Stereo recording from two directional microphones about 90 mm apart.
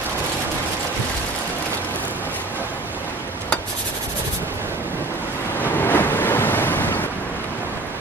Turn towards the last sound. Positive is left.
turn(degrees=20)  # may be behind; listen again after turning